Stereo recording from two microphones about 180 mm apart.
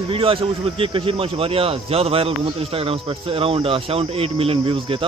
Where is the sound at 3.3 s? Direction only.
30° right (ahead or behind).